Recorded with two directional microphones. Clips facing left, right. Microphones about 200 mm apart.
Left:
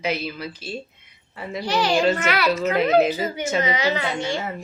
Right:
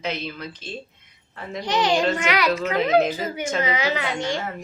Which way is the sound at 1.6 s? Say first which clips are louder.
Even; 20° right (ahead or behind).